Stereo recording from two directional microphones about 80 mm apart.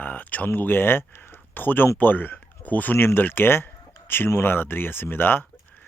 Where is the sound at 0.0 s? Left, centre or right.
Left.